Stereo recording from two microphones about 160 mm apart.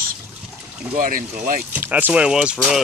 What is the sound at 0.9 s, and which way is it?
Speech, 60° right (ahead or behind).